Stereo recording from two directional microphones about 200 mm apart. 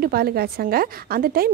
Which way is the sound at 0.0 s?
50° right (ahead or behind).